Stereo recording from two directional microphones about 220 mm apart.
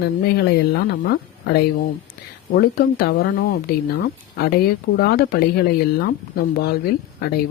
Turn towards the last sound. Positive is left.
turn(degrees=45)  # may be behind; listen again after turning